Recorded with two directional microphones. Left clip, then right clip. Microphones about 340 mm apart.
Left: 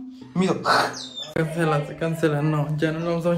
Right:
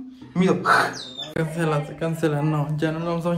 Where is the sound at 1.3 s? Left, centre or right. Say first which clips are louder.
Left 2 dB; centre.